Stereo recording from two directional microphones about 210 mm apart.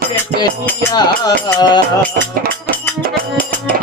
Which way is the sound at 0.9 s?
20° left (ahead or behind).